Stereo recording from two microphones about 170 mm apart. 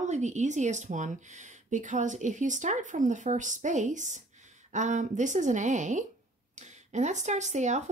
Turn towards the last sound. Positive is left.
turn(degrees=-45)  # may be behind; listen again after turning